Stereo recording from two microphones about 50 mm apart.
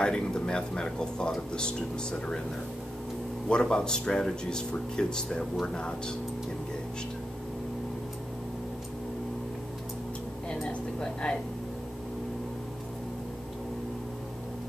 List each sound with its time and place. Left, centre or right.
0.0 s speech: centre
3.4 s speech: centre
11.2 s speech: centre